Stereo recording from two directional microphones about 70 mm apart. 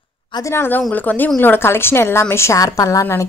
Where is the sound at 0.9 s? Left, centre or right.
Left.